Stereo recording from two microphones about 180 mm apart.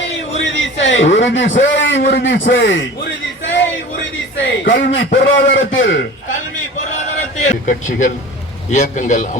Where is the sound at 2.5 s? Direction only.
90° left.